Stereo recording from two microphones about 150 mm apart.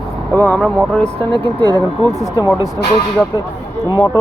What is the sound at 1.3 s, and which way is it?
Speech, 30° right (ahead or behind).